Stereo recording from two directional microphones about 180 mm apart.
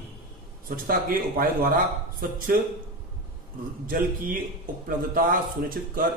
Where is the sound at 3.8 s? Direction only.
50° right (ahead or behind).